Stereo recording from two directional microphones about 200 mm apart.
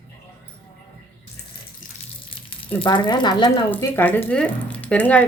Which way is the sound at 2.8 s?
20° left (ahead or behind).